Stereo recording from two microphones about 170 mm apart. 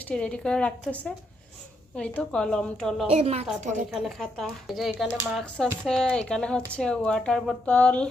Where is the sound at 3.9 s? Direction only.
Centre (ahead or behind).